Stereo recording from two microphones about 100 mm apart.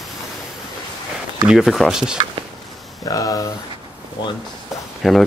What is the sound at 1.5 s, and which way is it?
Speech, 5° right (ahead or behind).